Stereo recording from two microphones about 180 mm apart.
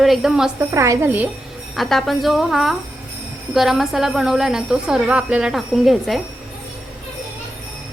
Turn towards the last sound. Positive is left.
turn(degrees=0)  # may be behind; listen again after turning